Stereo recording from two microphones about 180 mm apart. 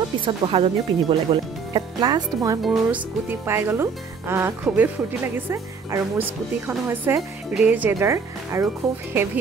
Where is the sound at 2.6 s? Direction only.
10° right (ahead or behind).